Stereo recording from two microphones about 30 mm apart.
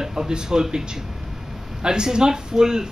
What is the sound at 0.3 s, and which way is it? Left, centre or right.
Speech, right.